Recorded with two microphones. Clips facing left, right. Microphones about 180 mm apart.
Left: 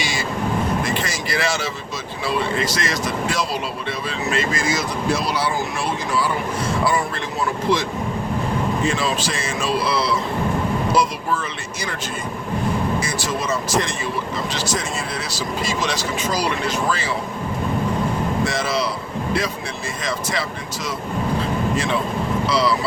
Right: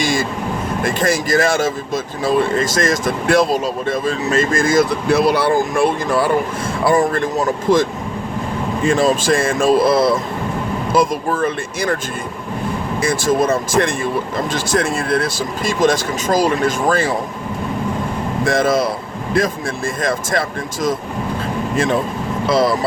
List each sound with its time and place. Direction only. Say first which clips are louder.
0.0 s speech: right 5 dB; 50° right (ahead or behind)
13.0 s speech: right 8 dB; 55° right (ahead or behind)
18.4 s speech: right 7 dB; 50° right (ahead or behind)
20.0 s speech: right 5 dB; 50° right (ahead or behind)
22.4 s speech: right 6 dB; 50° right (ahead or behind)